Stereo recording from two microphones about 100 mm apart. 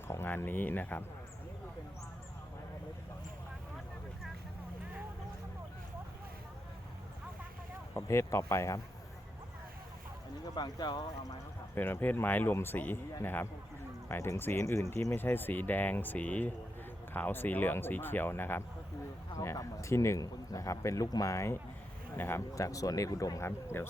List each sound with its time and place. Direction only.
0.1 s speech: 20° left (ahead or behind)
7.9 s speech: 30° left (ahead or behind)
10.5 s speech: 45° left (ahead or behind)
11.7 s speech: 20° left (ahead or behind)
23.5 s speech: 25° left (ahead or behind)